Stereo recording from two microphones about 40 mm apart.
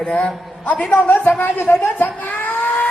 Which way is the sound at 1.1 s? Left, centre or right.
Left.